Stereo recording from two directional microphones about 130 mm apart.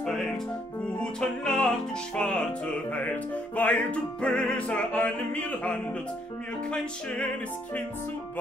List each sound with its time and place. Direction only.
0.0 s music: centre (ahead or behind)